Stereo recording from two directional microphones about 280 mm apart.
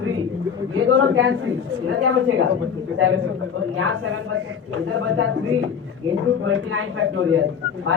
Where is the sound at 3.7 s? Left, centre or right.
Right.